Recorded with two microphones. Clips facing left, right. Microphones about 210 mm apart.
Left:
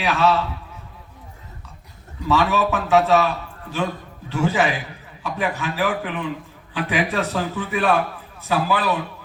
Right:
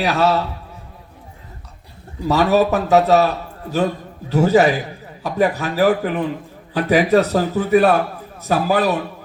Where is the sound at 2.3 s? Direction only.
40° right (ahead or behind).